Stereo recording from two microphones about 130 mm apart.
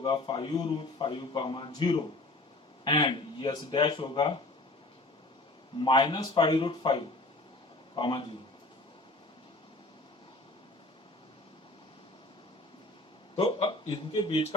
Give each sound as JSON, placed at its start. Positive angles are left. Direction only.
{"t": 0.0, "sound": "a man's voice", "side_deg": 40}
{"t": 5.8, "sound": "a man's voice", "side_deg": 35}
{"t": 13.3, "sound": "a man's voice", "side_deg": 45}